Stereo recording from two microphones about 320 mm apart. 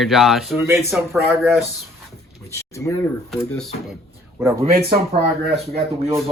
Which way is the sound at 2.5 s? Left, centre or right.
Centre.